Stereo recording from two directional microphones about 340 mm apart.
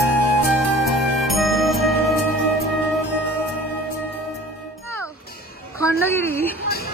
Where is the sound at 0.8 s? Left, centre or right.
Centre.